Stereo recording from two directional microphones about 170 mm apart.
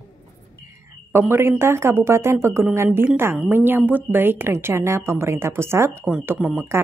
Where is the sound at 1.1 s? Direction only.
15° right (ahead or behind).